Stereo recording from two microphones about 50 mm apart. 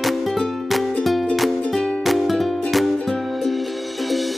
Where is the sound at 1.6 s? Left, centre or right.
Centre.